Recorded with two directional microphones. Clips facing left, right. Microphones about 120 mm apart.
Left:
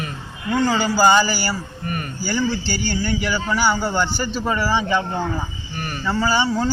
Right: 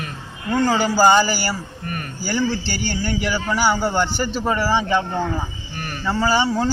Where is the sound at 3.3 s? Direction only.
10° right (ahead or behind).